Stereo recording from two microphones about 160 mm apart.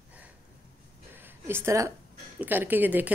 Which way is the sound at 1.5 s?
20° right (ahead or behind).